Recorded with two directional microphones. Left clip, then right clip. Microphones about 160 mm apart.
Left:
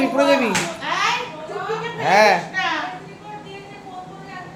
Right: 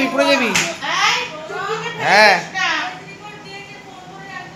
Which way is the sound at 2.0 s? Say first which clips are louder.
Right 3 dB; centre (ahead or behind).